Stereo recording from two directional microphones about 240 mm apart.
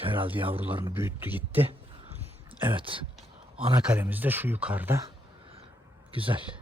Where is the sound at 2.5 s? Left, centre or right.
Right.